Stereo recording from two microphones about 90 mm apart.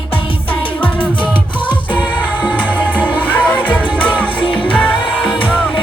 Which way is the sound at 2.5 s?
15° left (ahead or behind).